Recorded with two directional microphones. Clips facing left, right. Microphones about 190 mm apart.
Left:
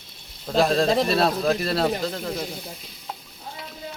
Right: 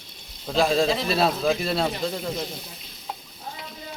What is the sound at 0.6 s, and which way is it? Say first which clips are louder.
Speech: left 2 dB; centre (ahead or behind).